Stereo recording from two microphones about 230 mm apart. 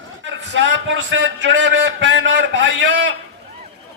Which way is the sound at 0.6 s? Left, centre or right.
Right.